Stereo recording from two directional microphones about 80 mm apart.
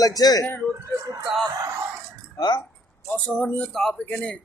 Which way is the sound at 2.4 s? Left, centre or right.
Left.